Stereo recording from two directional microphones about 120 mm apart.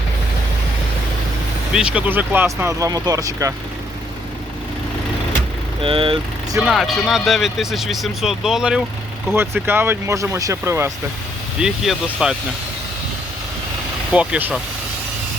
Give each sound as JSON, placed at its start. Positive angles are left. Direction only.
{"t": 1.7, "sound": "speech", "side_deg": -10}
{"t": 5.8, "sound": "speech", "side_deg": -50}
{"t": 6.6, "sound": "speech", "side_deg": -5}
{"t": 9.3, "sound": "speech", "side_deg": -20}
{"t": 11.6, "sound": "speech", "side_deg": -5}
{"t": 14.1, "sound": "speech", "side_deg": -10}